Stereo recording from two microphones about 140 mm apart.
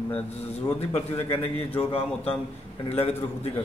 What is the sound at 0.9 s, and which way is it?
Speech, 45° left (ahead or behind).